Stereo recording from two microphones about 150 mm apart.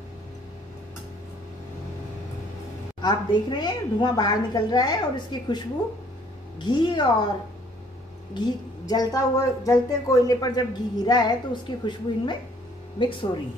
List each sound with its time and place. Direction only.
3.0 s a woman's voice: 30° left (ahead or behind)
6.6 s a woman's voice: 30° left (ahead or behind)
8.4 s a woman's voice: 25° left (ahead or behind)